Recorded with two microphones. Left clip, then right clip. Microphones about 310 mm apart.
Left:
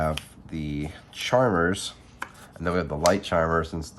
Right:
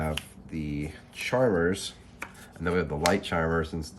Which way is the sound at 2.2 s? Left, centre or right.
Centre.